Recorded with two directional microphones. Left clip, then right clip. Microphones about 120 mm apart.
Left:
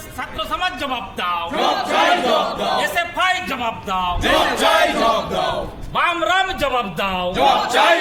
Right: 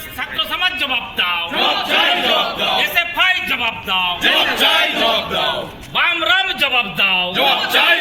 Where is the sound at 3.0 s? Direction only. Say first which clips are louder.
Right 3 dB; 35° left (ahead or behind).